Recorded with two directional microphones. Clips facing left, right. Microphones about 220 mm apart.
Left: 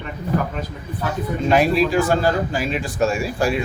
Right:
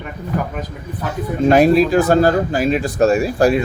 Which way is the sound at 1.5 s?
40° right (ahead or behind).